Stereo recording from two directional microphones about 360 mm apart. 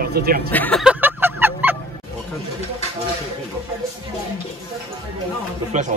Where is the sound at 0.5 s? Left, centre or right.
Centre.